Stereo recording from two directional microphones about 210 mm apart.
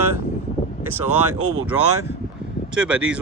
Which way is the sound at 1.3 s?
90° right.